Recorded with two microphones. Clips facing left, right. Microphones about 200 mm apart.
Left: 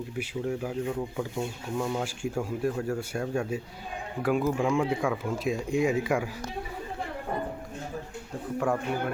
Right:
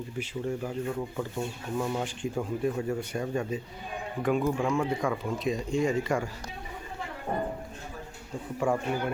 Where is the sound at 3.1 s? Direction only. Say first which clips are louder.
Left 1 dB; 10° left (ahead or behind).